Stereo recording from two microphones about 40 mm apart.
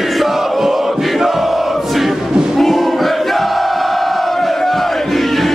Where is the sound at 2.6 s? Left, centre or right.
Centre.